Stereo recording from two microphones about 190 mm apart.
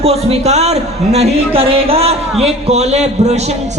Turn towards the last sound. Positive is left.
turn(degrees=-35)  # may be behind; listen again after turning